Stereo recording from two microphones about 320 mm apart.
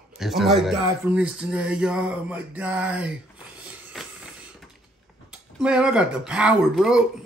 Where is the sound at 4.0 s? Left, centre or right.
Centre.